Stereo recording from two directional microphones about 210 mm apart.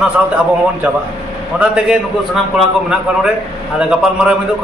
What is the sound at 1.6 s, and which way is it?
Speech, 5° right (ahead or behind).